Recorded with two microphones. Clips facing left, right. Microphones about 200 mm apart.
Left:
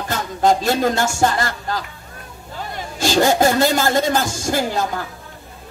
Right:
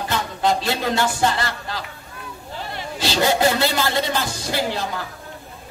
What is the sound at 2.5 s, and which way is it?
A woman's voice, 45° left (ahead or behind).